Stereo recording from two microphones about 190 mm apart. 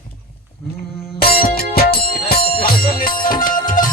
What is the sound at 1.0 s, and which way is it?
Music, 55° left (ahead or behind).